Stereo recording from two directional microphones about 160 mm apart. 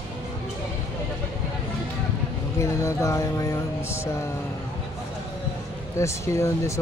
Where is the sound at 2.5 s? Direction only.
15° left (ahead or behind).